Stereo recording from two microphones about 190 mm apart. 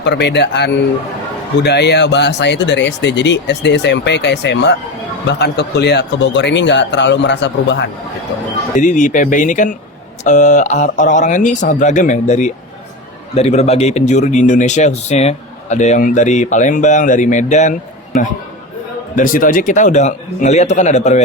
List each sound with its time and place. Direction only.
0.0 s speech: 65° left (ahead or behind)
8.7 s speech: 40° left (ahead or behind)